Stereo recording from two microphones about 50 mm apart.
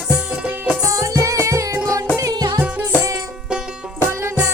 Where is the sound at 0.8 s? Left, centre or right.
Right.